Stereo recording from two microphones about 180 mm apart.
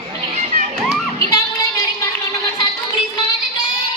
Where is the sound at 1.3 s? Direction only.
20° left (ahead or behind).